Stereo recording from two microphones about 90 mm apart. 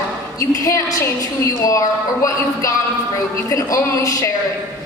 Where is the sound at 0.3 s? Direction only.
35° left (ahead or behind).